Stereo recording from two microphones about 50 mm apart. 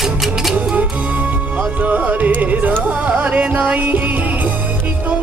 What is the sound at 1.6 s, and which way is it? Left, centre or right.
Music, right.